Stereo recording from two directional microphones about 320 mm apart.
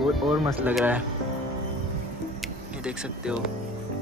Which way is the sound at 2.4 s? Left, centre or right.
Centre.